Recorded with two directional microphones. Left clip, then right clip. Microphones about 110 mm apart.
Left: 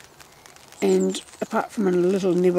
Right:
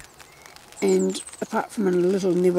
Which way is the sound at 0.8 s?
5° left (ahead or behind).